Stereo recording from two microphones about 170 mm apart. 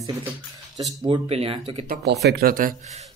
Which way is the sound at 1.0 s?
35° right (ahead or behind).